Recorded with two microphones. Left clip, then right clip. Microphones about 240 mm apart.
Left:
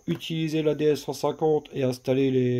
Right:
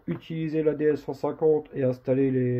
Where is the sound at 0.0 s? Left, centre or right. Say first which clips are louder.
Left 3 dB; left.